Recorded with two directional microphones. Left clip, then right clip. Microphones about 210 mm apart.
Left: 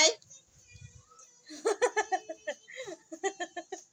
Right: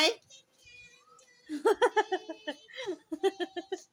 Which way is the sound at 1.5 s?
30° right (ahead or behind).